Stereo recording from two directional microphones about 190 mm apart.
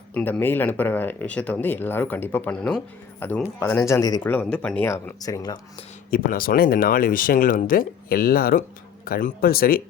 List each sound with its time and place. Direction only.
0.1 s speech: 10° left (ahead or behind)
6.1 s speech: 45° left (ahead or behind)